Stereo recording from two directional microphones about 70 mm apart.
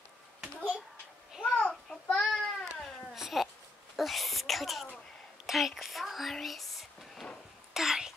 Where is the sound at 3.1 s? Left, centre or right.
Centre.